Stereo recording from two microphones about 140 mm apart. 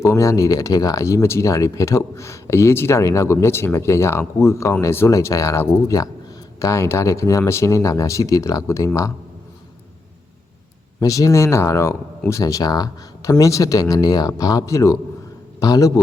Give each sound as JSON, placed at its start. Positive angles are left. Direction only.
{"t": 0.0, "sound": "speech", "side_deg": 20}
{"t": 11.0, "sound": "speech", "side_deg": 25}